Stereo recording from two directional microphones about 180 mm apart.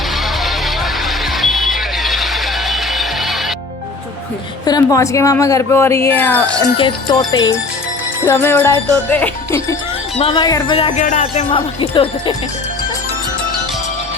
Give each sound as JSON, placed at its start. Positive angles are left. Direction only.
{"t": 1.4, "sound": "vehicle", "side_deg": 0}
{"t": 4.6, "sound": "a woman's voice", "side_deg": 20}
{"t": 6.7, "sound": "a woman's voice", "side_deg": 25}
{"t": 10.2, "sound": "speech", "side_deg": 30}
{"t": 10.9, "sound": "music", "side_deg": 45}
{"t": 11.5, "sound": "speech", "side_deg": 30}